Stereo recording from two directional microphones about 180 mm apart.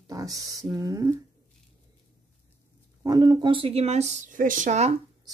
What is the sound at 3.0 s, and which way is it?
Speech, 20° right (ahead or behind).